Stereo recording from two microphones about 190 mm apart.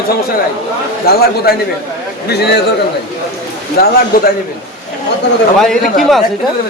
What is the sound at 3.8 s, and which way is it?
Speech, 50° left (ahead or behind).